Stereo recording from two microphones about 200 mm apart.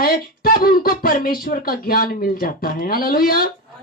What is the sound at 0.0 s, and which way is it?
Speech, 45° left (ahead or behind).